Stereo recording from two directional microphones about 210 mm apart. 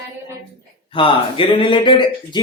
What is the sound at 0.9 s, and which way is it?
Speech, 25° left (ahead or behind).